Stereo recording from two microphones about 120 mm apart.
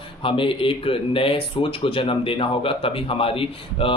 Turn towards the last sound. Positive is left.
turn(degrees=50)  # may be behind; listen again after turning